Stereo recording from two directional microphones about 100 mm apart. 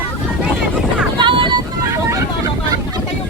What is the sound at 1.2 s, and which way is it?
Vehicle, 55° right (ahead or behind).